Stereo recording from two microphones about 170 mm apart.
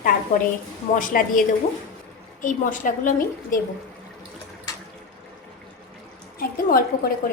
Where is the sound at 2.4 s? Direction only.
50° left (ahead or behind).